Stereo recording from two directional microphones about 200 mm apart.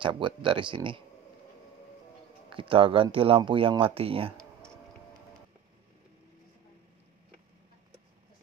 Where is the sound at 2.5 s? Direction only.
25° right (ahead or behind).